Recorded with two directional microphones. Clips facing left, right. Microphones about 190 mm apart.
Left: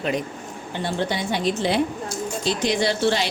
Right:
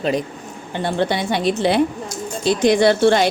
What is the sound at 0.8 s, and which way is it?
A woman's voice, 60° right (ahead or behind).